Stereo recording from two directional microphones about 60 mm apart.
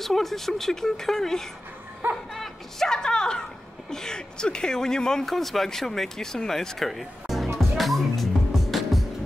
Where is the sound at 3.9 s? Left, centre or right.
Centre.